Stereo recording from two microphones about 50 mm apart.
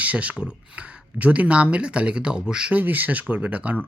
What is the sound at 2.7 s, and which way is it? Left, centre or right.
Speech, right.